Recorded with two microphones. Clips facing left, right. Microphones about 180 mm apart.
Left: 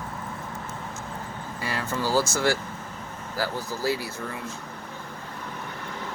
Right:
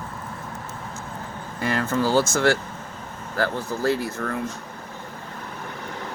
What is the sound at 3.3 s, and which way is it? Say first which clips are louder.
Speech: right 5 dB; 5° left (ahead or behind).